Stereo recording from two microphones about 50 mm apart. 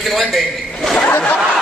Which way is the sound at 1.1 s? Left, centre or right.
Left.